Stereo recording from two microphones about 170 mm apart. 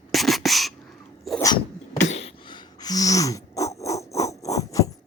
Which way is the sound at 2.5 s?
25° left (ahead or behind).